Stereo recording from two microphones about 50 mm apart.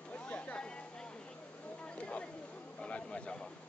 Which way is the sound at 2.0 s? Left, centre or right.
Left.